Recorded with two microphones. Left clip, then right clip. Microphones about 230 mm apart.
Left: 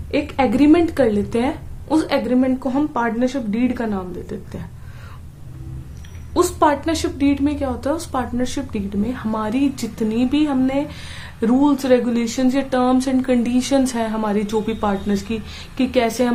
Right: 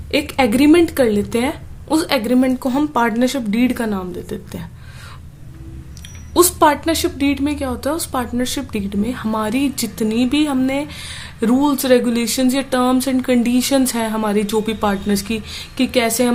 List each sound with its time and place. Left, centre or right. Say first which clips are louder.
0.1 s a woman's voice: right 2 dB; right
6.3 s a woman's voice: right 3 dB; right